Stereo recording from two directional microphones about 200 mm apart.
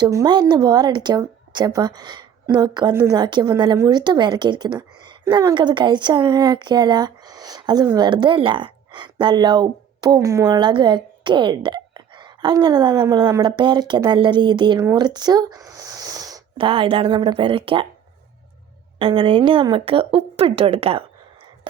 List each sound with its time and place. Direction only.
0.0 s a woman's voice: 20° right (ahead or behind)
18.9 s speech: 25° right (ahead or behind)